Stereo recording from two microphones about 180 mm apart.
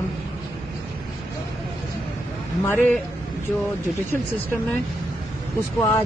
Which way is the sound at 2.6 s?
10° left (ahead or behind).